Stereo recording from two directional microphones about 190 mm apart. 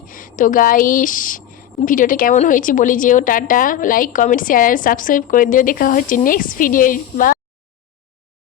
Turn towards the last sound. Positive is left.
turn(degrees=45)  # may be behind; listen again after turning